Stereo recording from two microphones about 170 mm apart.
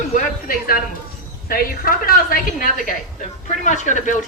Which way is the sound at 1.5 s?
55° left (ahead or behind).